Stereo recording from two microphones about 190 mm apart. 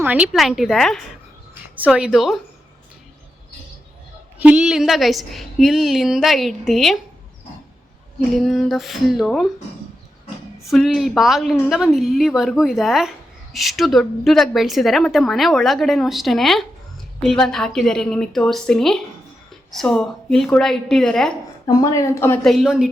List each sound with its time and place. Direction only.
0.0 s speech: 5° right (ahead or behind)
4.4 s speech: 5° right (ahead or behind)
8.3 s speech: centre (ahead or behind)
10.6 s speech: centre (ahead or behind)
21.8 s speech: 15° left (ahead or behind)
22.4 s speech: centre (ahead or behind)